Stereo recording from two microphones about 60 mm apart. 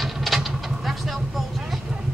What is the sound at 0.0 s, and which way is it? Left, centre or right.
Vehicle, centre.